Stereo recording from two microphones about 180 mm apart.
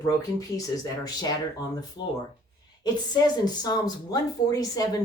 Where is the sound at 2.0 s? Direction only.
80° left.